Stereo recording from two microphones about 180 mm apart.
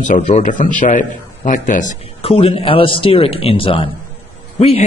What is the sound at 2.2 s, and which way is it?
A man's voice, 30° left (ahead or behind).